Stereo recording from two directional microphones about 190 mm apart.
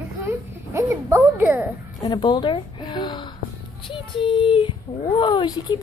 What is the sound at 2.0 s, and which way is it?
A woman's voice, 20° left (ahead or behind).